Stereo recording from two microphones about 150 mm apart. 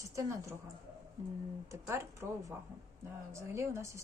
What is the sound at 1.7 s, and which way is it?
Speech, 20° right (ahead or behind).